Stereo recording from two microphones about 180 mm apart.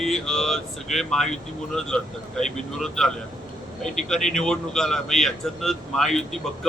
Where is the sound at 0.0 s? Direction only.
Centre (ahead or behind).